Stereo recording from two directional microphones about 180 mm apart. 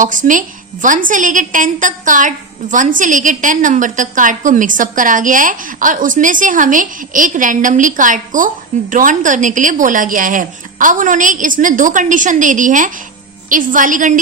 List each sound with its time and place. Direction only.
0.0 s a woman's voice: 45° right (ahead or behind)